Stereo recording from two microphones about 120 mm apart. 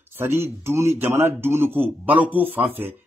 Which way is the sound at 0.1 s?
20° right (ahead or behind).